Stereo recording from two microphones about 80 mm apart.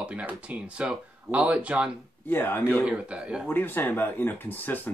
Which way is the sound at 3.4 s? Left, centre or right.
Left.